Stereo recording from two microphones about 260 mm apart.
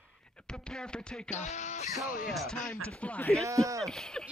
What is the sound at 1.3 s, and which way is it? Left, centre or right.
Speech, left.